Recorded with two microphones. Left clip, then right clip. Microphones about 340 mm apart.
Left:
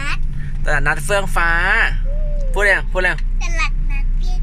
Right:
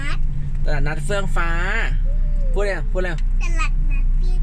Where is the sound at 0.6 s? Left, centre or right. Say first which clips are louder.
Left 9 dB; centre.